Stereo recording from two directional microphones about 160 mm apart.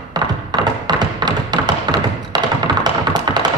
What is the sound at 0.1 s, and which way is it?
Tap, 25° right (ahead or behind).